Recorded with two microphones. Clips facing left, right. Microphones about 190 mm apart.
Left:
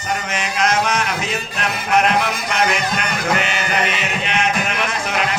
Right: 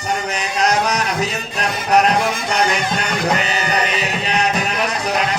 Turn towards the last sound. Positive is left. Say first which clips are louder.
# right 2 dB
turn(degrees=-35)  # may be behind; listen again after turning